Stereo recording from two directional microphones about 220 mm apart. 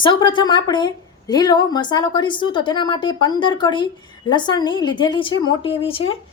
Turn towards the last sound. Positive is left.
turn(degrees=25)  # may be behind; listen again after turning